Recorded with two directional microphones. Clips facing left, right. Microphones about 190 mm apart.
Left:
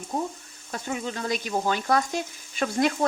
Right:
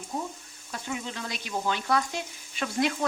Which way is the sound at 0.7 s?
45° left (ahead or behind).